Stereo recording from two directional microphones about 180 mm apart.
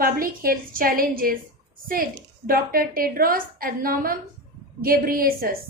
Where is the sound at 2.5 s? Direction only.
55° right (ahead or behind).